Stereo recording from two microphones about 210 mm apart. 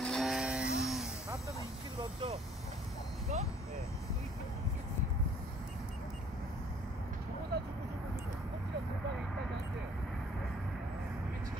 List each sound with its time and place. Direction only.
0.0 s music: centre (ahead or behind)
7.5 s vehicle: 50° right (ahead or behind)